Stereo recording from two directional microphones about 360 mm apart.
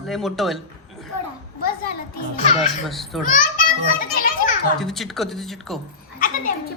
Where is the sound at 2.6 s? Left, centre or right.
Centre.